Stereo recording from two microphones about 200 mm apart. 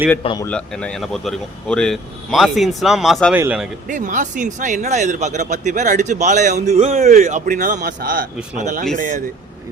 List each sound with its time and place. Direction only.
0.2 s a man's voice: 25° left (ahead or behind)
0.4 s speech: 5° left (ahead or behind)
3.8 s speech: 40° right (ahead or behind)